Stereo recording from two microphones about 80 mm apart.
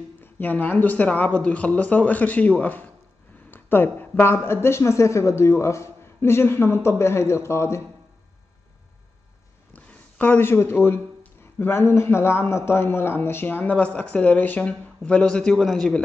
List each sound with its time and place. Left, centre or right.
0.2 s a man's voice: left
9.8 s a man's voice: centre